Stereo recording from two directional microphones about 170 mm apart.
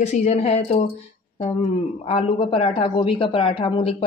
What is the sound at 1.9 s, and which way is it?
Speech, 35° left (ahead or behind).